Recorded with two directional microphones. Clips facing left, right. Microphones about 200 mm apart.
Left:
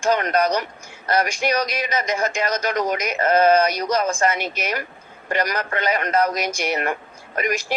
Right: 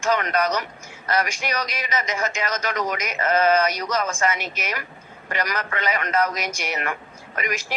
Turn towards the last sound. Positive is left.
turn(degrees=40)  # may be behind; listen again after turning